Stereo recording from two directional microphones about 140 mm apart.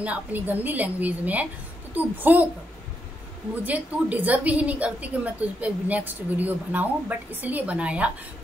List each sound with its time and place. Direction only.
0.0 s a woman's voice: 10° right (ahead or behind)
3.6 s a woman's voice: 10° right (ahead or behind)